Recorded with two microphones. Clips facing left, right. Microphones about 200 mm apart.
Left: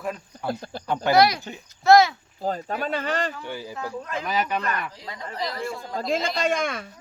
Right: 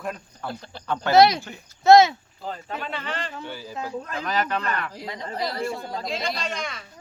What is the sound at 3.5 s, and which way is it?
Speech, 15° left (ahead or behind).